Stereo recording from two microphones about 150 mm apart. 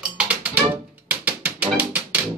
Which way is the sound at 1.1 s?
10° right (ahead or behind).